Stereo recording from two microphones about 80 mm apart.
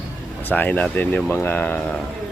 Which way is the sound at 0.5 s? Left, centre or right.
Centre.